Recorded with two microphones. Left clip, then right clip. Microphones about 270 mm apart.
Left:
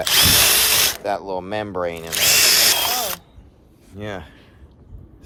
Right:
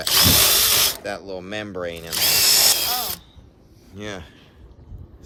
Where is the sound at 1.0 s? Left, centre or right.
Centre.